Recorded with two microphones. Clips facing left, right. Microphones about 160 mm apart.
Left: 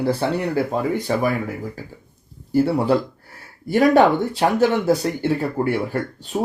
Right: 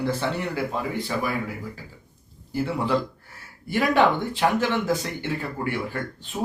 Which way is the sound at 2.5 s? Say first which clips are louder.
Left 7 dB; 40° left (ahead or behind).